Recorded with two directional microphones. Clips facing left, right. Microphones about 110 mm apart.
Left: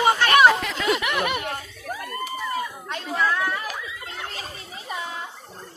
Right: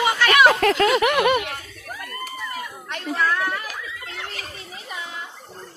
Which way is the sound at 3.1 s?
15° left (ahead or behind).